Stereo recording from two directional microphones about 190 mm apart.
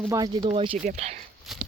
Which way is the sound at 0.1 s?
20° right (ahead or behind).